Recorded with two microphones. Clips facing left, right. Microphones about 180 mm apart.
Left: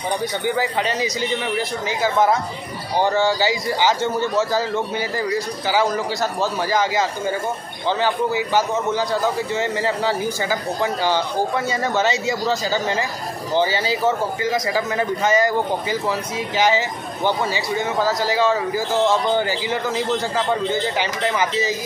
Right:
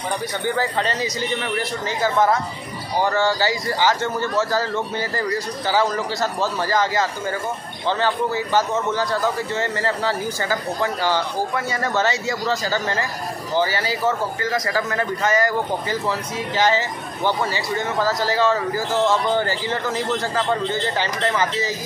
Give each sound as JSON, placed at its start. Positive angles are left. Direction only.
{"t": 0.6, "sound": "a man's voice", "side_deg": 10}